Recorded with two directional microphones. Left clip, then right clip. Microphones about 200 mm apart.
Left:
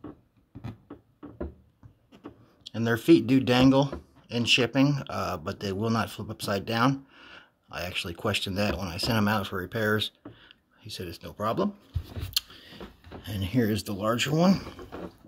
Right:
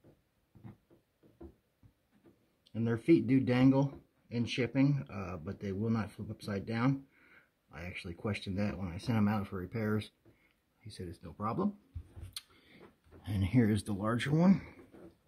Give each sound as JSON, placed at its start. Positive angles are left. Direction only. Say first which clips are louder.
{"t": 2.7, "sound": "speech", "louder": "left 8 dB", "side_deg": -20}
{"t": 13.2, "sound": "speech", "louder": "left 4 dB", "side_deg": -40}